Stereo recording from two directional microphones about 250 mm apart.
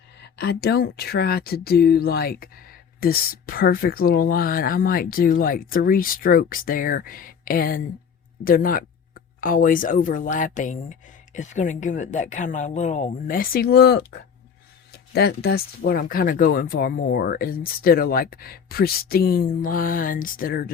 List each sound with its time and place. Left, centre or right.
0.2 s a woman's voice: left
15.1 s a woman's voice: left